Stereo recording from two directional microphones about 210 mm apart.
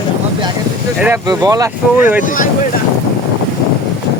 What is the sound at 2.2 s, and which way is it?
Speech, 40° left (ahead or behind).